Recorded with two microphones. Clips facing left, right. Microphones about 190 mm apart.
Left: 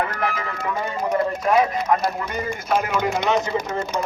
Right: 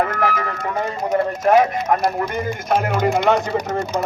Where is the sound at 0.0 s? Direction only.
45° right (ahead or behind).